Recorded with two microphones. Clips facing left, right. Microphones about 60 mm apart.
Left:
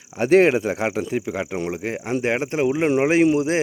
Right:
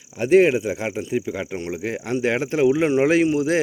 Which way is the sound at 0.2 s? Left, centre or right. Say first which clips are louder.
Even; left.